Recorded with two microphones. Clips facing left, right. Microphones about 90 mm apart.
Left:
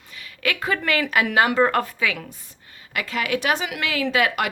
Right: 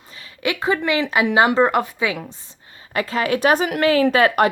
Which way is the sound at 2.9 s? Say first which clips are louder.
Right 4 dB; 35° right (ahead or behind).